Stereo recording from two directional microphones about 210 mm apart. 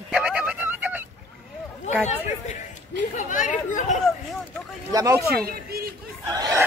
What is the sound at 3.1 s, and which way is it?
Speech, 35° left (ahead or behind).